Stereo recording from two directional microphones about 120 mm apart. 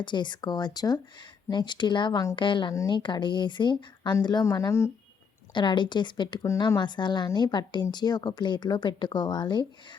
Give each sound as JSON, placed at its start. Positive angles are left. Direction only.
{"t": 0.0, "sound": "a woman's voice", "side_deg": 40}
{"t": 5.5, "sound": "a woman's voice", "side_deg": 40}